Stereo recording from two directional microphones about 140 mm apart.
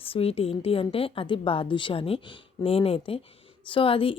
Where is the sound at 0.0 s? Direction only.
45° left (ahead or behind).